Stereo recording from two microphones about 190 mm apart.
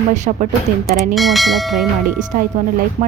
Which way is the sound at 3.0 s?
35° right (ahead or behind).